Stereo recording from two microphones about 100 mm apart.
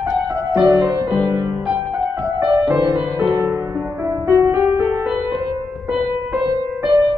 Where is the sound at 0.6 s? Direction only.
25° right (ahead or behind).